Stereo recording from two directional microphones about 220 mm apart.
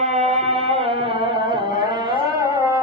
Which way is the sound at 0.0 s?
30° right (ahead or behind).